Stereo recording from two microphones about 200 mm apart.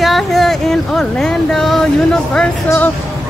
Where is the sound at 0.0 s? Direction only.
Centre (ahead or behind).